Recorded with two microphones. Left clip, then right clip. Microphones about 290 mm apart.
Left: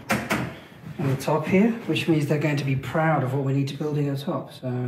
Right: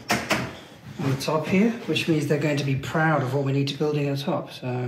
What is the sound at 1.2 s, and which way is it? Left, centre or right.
Speech, centre.